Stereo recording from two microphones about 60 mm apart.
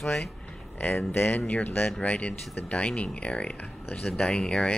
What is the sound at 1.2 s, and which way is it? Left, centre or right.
Speech, left.